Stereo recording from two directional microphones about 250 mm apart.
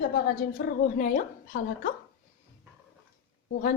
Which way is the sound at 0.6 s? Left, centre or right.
Left.